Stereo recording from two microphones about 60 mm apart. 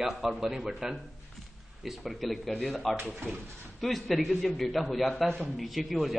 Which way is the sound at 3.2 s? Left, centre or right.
Right.